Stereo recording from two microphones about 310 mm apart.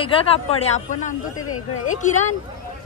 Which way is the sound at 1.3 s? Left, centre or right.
Left.